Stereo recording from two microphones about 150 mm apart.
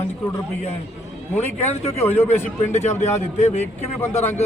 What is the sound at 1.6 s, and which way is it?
A man's voice, 45° left (ahead or behind).